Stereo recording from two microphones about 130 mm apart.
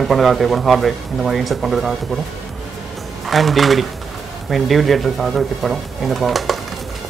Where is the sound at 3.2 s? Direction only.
Centre (ahead or behind).